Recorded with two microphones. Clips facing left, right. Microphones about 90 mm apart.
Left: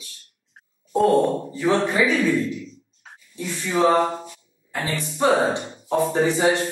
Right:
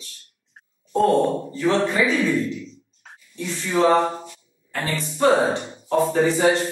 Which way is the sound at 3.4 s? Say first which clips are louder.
Right 1 dB; 15° left (ahead or behind).